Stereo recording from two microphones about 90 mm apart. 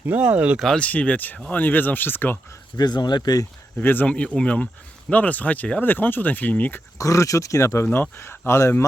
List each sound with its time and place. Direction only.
0.2 s speech: 15° right (ahead or behind)
0.8 s speech: 15° left (ahead or behind)
2.7 s speech: 50° left (ahead or behind)
3.8 s speech: 20° left (ahead or behind)
7.0 s speech: 35° left (ahead or behind)
7.9 s speech: 25° left (ahead or behind)